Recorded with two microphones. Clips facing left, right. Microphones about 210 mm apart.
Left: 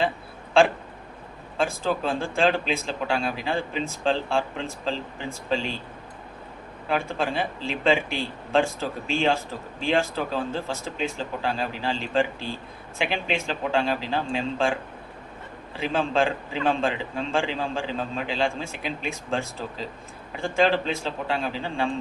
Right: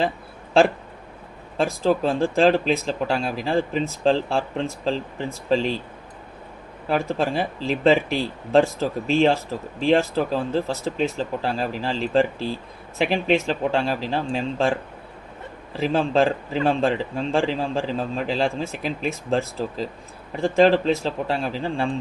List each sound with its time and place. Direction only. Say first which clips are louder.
1.5 s a man's voice: right 5 dB; 40° right (ahead or behind)
7.0 s a man's voice: right 4 dB; 40° right (ahead or behind)
15.8 s a man's voice: right 4 dB; 40° right (ahead or behind)